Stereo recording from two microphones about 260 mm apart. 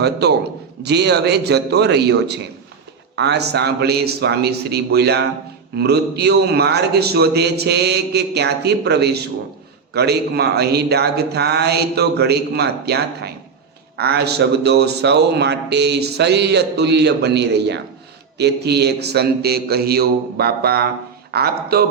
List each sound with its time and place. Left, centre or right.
0.0 s speech: right